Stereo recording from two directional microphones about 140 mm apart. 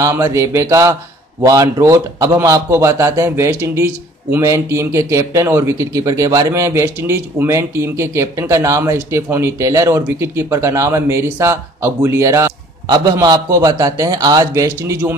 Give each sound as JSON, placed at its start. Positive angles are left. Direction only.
{"t": 0.0, "sound": "speech", "side_deg": -20}